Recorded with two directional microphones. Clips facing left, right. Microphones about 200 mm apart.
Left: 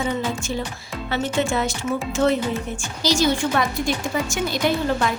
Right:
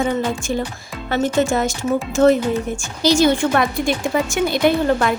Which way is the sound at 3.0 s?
55° right (ahead or behind).